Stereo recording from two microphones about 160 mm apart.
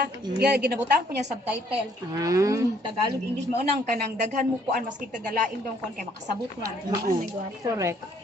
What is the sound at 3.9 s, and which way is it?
Speech, 60° right (ahead or behind).